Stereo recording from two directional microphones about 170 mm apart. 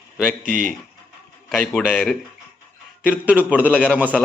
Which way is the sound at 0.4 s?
50° right (ahead or behind).